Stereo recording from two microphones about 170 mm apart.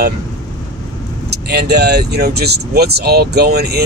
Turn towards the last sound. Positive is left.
turn(degrees=-70)  # may be behind; listen again after turning